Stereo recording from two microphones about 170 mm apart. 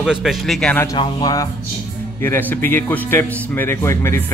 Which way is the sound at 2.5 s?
10° left (ahead or behind).